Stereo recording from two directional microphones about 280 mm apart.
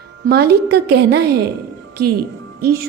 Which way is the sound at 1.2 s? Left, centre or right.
Right.